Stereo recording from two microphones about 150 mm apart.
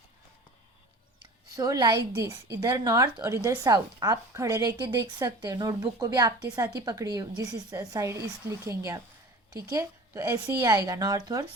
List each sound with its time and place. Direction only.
1.5 s a woman's voice: 25° right (ahead or behind)
9.5 s a woman's voice: 25° right (ahead or behind)